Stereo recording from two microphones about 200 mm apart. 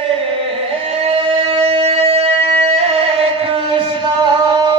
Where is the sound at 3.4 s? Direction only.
25° right (ahead or behind).